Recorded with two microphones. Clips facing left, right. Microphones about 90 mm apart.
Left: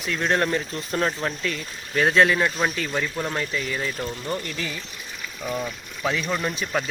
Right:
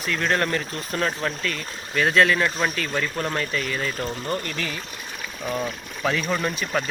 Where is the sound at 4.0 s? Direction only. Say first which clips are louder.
Right 1 dB; 45° right (ahead or behind).